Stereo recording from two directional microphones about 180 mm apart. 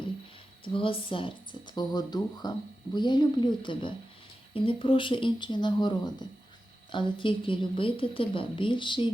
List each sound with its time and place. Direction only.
0.6 s a woman's voice: 30° left (ahead or behind)